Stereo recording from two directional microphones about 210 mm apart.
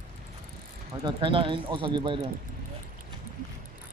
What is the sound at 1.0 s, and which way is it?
Speech, 25° right (ahead or behind).